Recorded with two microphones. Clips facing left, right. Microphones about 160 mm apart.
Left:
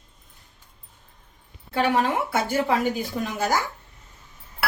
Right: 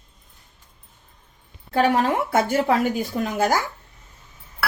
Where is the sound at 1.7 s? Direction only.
40° right (ahead or behind).